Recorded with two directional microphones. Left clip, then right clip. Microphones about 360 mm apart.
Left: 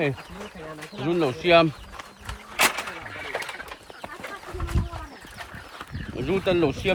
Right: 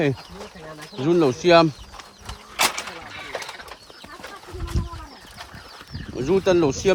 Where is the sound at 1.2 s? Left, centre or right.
Centre.